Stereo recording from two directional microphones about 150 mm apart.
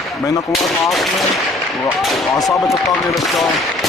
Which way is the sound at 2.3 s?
25° left (ahead or behind).